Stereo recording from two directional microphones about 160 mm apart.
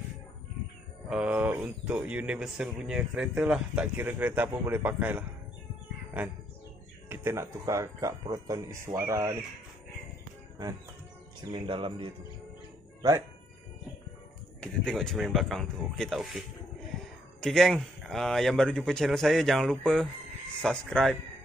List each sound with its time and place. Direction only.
1.0 s a man's voice: 5° right (ahead or behind)
7.1 s speech: 15° right (ahead or behind)
10.6 s speech: 25° right (ahead or behind)
14.6 s speech: 5° left (ahead or behind)